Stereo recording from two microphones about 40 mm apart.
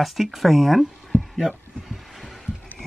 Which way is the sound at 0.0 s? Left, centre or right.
Centre.